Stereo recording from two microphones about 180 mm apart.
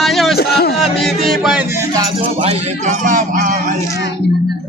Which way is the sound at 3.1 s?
45° right (ahead or behind).